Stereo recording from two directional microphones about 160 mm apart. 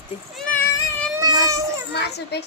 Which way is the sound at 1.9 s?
90° left.